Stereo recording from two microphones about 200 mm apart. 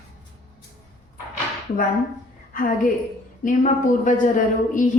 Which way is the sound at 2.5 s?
45° left (ahead or behind).